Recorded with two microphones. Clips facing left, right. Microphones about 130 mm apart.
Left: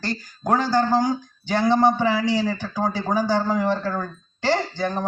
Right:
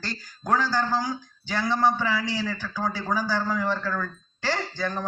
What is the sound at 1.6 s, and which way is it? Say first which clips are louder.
Speech: left 5 dB; 20° left (ahead or behind).